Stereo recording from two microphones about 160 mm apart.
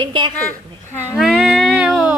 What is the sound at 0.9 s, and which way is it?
Speech, 15° left (ahead or behind).